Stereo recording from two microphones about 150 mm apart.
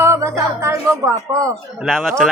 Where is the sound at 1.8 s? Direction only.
5° left (ahead or behind).